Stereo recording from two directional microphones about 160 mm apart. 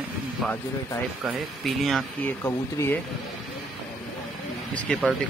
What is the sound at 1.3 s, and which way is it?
Speech, centre (ahead or behind).